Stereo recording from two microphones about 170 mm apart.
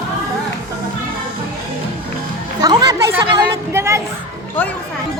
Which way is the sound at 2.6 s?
20° right (ahead or behind).